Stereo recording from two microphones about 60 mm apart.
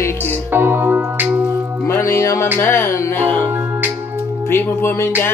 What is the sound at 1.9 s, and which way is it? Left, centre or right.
Music, left.